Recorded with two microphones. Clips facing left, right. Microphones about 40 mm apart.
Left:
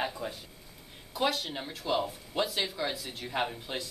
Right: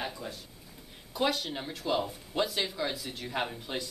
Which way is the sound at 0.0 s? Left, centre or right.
Centre.